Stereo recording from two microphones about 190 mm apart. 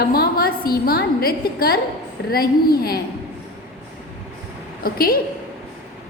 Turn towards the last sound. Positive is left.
turn(degrees=50)  # may be behind; listen again after turning